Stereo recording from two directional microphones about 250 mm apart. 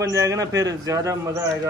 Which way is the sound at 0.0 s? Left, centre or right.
Centre.